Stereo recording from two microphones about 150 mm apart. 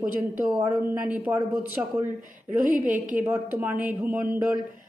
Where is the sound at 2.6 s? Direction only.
60° right (ahead or behind).